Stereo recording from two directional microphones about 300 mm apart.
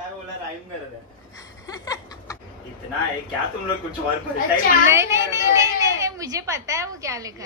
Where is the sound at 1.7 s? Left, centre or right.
Centre.